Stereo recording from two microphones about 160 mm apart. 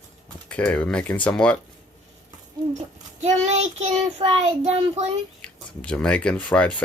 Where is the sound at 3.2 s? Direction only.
45° right (ahead or behind).